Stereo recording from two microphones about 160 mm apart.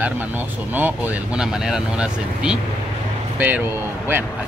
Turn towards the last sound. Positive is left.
turn(degrees=-10)  # may be behind; listen again after turning